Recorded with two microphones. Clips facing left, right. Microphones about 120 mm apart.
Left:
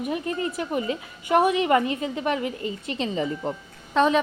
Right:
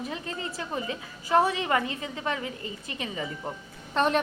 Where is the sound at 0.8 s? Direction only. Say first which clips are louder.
Left 6 dB; 20° left (ahead or behind).